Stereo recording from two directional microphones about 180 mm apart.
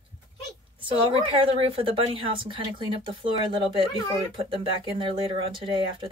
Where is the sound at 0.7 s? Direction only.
30° right (ahead or behind).